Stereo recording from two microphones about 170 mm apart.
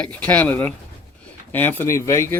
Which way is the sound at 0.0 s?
10° left (ahead or behind).